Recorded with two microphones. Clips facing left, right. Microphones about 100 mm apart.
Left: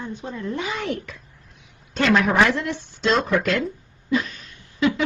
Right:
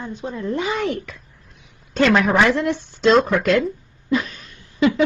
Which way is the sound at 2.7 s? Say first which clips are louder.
Right 6 dB; 50° right (ahead or behind).